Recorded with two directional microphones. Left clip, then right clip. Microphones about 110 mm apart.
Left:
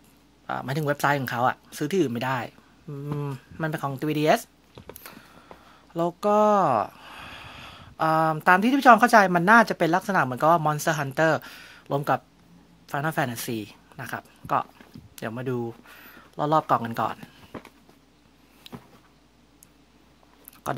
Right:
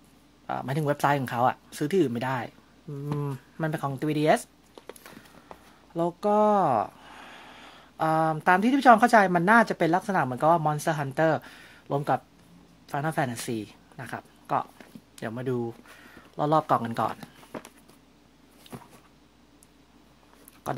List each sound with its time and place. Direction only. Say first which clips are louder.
0.5 s speech: left 1 dB; 10° left (ahead or behind)
3.1 s speech: even; 5° left (ahead or behind)
20.7 s speech: left 2 dB; 20° left (ahead or behind)